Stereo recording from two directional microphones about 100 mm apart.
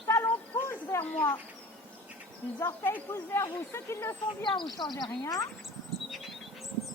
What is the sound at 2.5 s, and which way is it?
Speech, 20° left (ahead or behind).